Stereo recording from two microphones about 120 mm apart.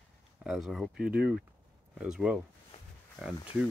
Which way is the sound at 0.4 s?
5° right (ahead or behind).